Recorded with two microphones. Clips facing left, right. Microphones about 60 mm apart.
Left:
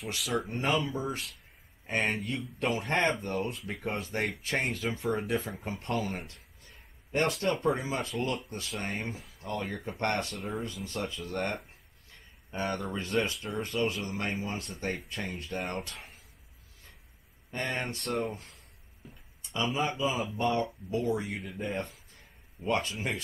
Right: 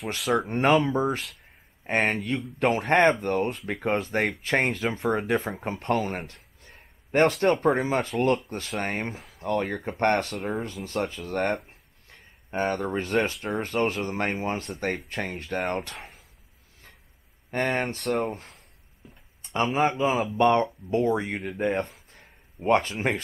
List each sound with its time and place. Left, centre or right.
0.4 s speech: right
7.6 s speech: right
12.1 s a sound: right
13.3 s speech: right
13.6 s speech: right
17.5 s speech: right
19.0 s a sound: centre
19.4 s speech: right
21.9 s a sound: right